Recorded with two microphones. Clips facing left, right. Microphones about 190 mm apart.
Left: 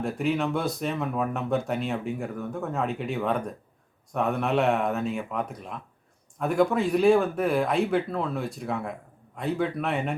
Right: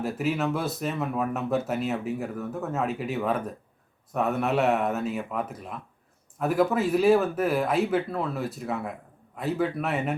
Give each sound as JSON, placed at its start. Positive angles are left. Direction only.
{"t": 0.0, "sound": "speech", "side_deg": -5}